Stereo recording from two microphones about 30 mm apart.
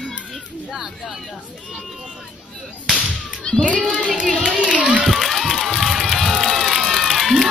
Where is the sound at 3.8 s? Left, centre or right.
Right.